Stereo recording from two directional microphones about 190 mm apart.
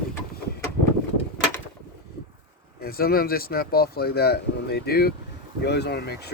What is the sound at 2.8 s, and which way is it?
Speech, 50° left (ahead or behind).